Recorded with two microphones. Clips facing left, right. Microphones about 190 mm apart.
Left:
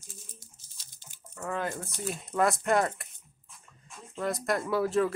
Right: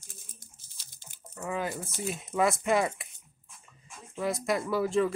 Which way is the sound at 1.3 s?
5° right (ahead or behind).